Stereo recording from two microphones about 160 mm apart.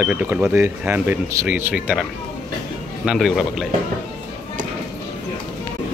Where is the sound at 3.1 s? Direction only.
Centre (ahead or behind).